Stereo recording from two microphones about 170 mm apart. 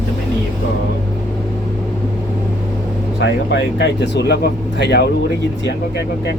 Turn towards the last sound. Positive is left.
turn(degrees=75)  # may be behind; listen again after turning